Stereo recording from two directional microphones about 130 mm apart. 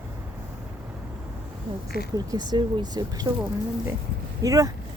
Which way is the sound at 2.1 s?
30° right (ahead or behind).